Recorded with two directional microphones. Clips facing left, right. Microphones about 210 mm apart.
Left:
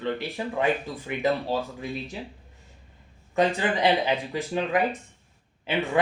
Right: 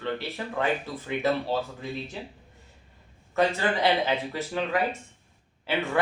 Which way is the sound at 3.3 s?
15° left (ahead or behind).